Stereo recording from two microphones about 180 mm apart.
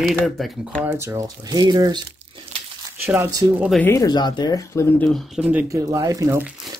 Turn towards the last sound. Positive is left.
turn(degrees=-20)  # may be behind; listen again after turning